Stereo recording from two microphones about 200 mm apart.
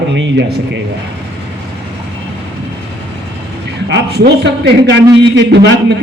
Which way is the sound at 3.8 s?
55° right (ahead or behind).